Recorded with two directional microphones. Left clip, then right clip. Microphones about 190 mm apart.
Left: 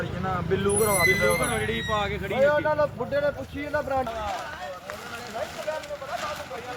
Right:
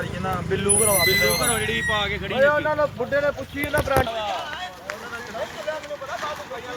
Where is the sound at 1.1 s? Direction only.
30° left (ahead or behind).